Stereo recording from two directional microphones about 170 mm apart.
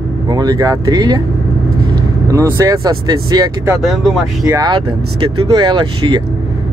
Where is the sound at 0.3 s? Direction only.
25° right (ahead or behind).